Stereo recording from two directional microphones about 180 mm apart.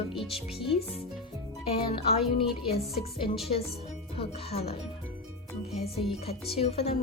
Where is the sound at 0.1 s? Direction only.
Centre (ahead or behind).